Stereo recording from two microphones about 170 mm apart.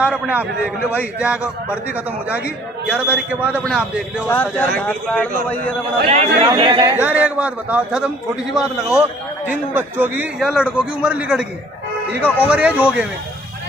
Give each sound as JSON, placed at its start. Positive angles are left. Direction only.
{"t": 0.0, "sound": "a man's voice", "side_deg": -10}
{"t": 4.3, "sound": "speech", "side_deg": 10}
{"t": 6.0, "sound": "speech", "side_deg": -35}
{"t": 7.0, "sound": "a man's voice", "side_deg": -10}
{"t": 12.4, "sound": "a man's voice", "side_deg": -10}